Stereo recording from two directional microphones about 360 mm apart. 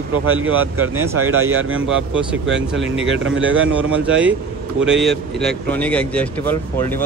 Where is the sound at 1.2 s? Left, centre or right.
Right.